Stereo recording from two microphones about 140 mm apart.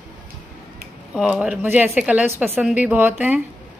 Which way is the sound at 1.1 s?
5° right (ahead or behind).